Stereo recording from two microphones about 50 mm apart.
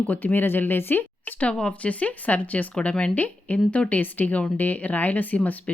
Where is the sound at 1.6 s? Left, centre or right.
Left.